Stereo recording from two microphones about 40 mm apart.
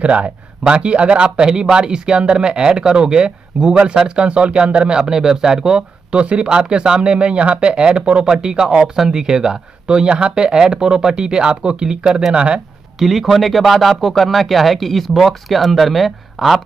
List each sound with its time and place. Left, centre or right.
0.0 s speech: right
13.0 s speech: centre